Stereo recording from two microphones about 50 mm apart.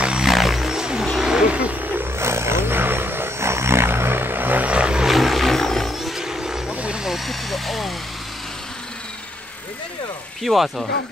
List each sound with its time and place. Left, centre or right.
0.0 s a sound: centre
0.3 s a sound: centre
1.0 s vehicle: centre
1.5 s wild animals: right
2.1 s vehicle: right
4.6 s vehicle: right
5.0 s vehicle: centre
7.1 s vehicle: centre
10.4 s speech: centre